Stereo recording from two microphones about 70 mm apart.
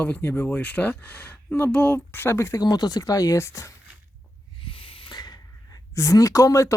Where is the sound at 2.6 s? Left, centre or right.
Left.